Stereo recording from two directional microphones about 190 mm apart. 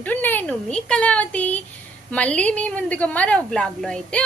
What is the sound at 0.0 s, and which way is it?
A woman's voice, 10° left (ahead or behind).